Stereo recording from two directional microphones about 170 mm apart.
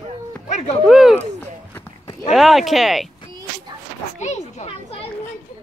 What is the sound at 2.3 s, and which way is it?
Speech, centre (ahead or behind).